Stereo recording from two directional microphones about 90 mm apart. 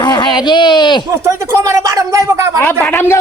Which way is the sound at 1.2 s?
30° right (ahead or behind).